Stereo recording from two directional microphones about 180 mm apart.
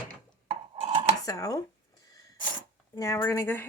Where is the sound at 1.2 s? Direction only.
20° left (ahead or behind).